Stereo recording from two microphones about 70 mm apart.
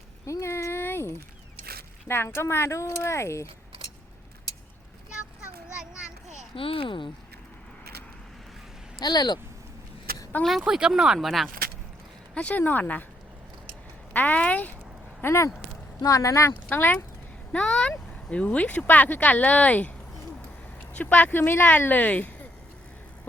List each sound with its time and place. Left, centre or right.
0.3 s a sound: left
2.0 s speech: left
9.0 s speech: left
10.4 s speech: centre
12.3 s speech: centre
14.1 s speech: left
15.2 s speech: left
16.0 s speech: left
16.6 s speech: left
17.5 s speech: centre
20.9 s speech: left